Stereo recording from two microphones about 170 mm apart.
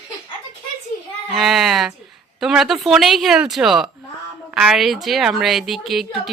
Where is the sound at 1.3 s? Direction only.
Centre (ahead or behind).